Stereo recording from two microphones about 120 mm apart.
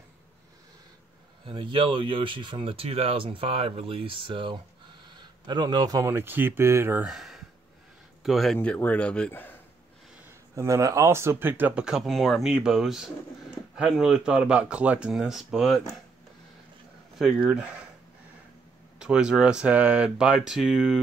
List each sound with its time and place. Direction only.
1.4 s speech: 45° right (ahead or behind)
5.5 s speech: 35° right (ahead or behind)
6.0 s speech: 20° right (ahead or behind)
7.1 s speech: centre (ahead or behind)
8.5 s speech: 15° left (ahead or behind)
10.5 s speech: 25° right (ahead or behind); by 16.0 s centre (ahead or behind)
17.2 s speech: 5° right (ahead or behind)
18.9 s speech: 10° right (ahead or behind)